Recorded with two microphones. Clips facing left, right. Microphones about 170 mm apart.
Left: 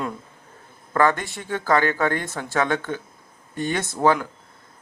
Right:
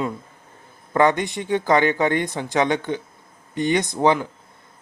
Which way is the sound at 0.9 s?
20° right (ahead or behind).